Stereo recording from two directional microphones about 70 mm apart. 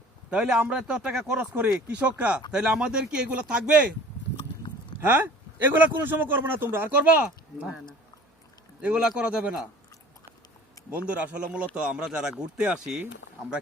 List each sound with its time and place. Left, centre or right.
0.3 s speech: centre
1.5 s speech: right
4.9 s speech: right
8.8 s speech: centre
10.9 s speech: centre